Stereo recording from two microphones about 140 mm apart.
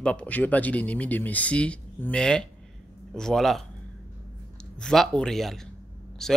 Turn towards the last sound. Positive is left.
turn(degrees=5)  # may be behind; listen again after turning